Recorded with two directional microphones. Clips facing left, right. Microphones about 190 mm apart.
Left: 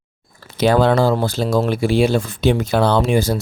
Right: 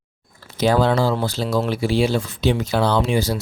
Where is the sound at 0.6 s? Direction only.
60° left (ahead or behind).